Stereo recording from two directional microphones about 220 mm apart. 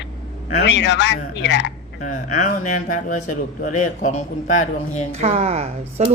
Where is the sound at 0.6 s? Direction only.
55° left (ahead or behind).